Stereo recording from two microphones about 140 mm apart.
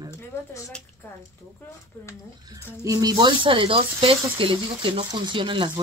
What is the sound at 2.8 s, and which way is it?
Speech, 25° right (ahead or behind).